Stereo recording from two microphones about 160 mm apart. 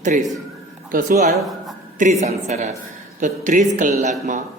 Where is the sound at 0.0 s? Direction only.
50° right (ahead or behind).